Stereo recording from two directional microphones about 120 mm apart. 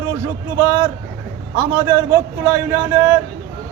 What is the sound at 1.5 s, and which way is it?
A man's voice, 20° right (ahead or behind).